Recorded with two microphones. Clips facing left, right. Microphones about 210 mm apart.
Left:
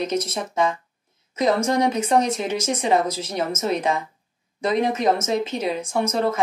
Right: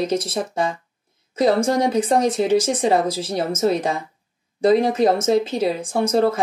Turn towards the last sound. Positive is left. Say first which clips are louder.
# right 4 dB
turn(degrees=-30)  # may be behind; listen again after turning